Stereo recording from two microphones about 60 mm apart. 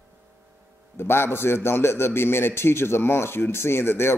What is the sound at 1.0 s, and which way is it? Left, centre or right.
A man's voice, left.